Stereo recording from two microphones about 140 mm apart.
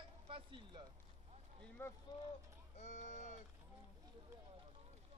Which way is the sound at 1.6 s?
15° left (ahead or behind).